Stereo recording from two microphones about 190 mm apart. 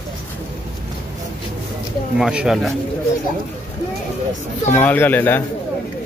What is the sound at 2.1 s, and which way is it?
Speech, 5° right (ahead or behind).